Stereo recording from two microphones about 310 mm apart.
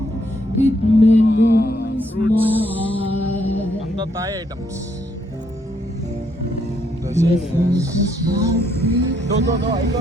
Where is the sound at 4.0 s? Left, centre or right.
Centre.